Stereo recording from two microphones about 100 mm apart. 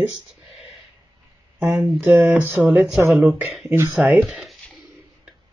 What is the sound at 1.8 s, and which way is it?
Speech, 20° right (ahead or behind).